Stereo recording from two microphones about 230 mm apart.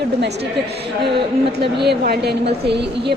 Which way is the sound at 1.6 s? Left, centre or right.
Right.